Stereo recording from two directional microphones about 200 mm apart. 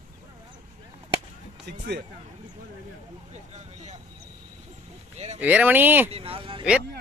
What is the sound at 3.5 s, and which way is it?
Speech, 35° right (ahead or behind).